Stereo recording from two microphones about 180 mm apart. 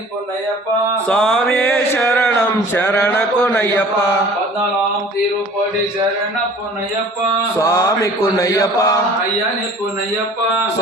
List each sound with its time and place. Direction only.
1.0 s a man's voice: 5° left (ahead or behind)
1.5 s a sound: 15° left (ahead or behind)
3.0 s a man's voice: 5° left (ahead or behind)
7.6 s mantra: 15° left (ahead or behind)